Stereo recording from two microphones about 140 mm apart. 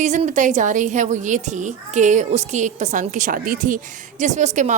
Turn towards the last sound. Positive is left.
turn(degrees=-60)  # may be behind; listen again after turning